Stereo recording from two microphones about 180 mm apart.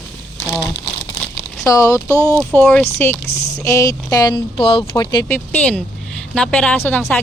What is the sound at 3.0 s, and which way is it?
Speech, 10° left (ahead or behind).